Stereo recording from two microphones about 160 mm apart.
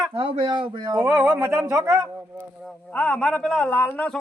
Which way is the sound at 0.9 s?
10° right (ahead or behind).